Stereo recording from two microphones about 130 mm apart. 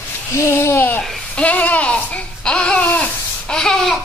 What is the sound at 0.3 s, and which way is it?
Speech, 20° left (ahead or behind).